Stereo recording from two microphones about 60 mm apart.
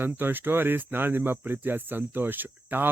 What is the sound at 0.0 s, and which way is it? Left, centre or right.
Speech, right.